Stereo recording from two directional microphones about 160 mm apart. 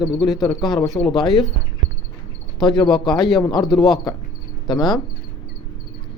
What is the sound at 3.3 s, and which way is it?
Speech, 25° left (ahead or behind).